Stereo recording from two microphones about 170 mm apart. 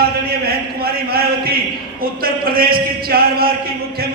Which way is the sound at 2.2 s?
60° right (ahead or behind).